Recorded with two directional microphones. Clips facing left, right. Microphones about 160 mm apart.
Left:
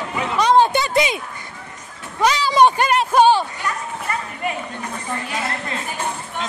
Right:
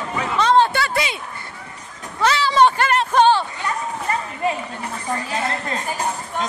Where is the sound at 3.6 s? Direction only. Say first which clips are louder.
Right 2 dB; 30° right (ahead or behind).